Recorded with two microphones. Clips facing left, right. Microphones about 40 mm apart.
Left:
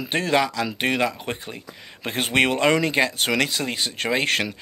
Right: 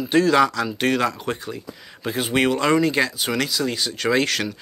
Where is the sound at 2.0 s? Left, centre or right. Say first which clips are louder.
Even; left.